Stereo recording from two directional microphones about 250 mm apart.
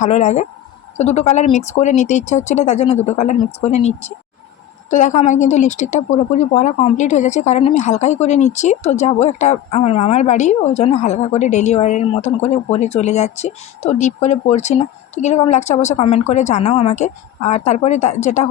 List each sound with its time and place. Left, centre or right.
0.0 s a woman's voice: left